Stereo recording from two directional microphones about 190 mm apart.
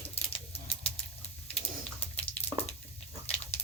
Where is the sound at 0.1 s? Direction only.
30° left (ahead or behind).